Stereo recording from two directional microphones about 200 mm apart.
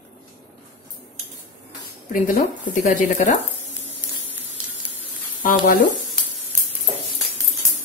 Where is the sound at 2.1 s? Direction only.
45° left (ahead or behind).